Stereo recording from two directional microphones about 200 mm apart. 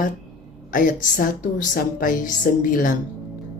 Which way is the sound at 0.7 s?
45° left (ahead or behind).